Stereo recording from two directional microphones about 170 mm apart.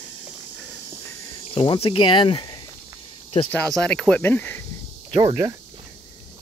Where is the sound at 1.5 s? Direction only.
35° left (ahead or behind).